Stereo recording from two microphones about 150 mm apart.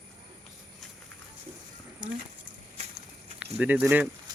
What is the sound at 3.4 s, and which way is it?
Speech, 5° right (ahead or behind).